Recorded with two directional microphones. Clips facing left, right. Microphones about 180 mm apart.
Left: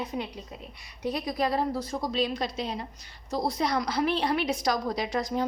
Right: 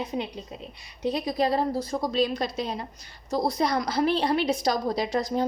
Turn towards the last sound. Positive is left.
turn(degrees=-30)  # may be behind; listen again after turning